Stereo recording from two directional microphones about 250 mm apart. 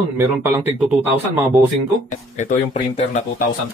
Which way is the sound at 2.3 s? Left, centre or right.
Left.